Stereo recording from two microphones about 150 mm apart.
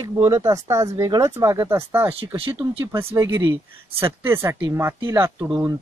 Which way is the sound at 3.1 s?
20° right (ahead or behind).